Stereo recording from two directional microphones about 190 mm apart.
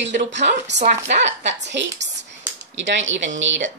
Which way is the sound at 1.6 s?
70° right (ahead or behind).